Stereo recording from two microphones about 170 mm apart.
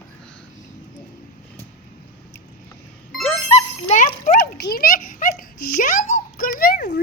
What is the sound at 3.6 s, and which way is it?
Dog, 45° left (ahead or behind).